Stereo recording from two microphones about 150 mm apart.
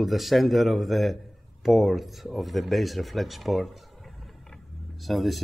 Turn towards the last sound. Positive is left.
turn(degrees=0)  # may be behind; listen again after turning